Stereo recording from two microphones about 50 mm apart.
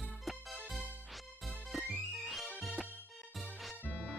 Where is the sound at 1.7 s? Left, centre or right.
Centre.